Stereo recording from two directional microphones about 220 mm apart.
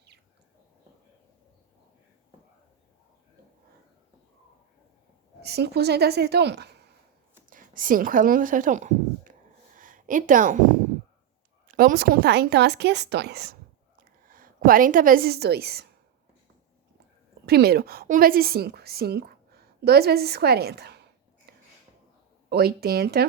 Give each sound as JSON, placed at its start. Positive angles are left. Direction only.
{"t": 5.4, "sound": "speech", "side_deg": -45}
{"t": 7.5, "sound": "a woman's voice", "side_deg": -40}
{"t": 9.7, "sound": "a sound", "side_deg": -35}
{"t": 11.7, "sound": "a woman's voice", "side_deg": -40}
{"t": 17.4, "sound": "a woman's voice", "side_deg": -45}
{"t": 21.5, "sound": "a sound", "side_deg": -45}
{"t": 22.4, "sound": "speech", "side_deg": -45}